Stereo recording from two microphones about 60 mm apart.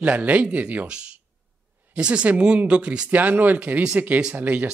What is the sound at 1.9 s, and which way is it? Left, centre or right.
Speech, centre.